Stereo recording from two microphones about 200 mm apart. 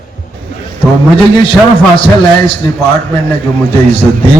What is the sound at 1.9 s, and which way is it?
Speech, 25° left (ahead or behind).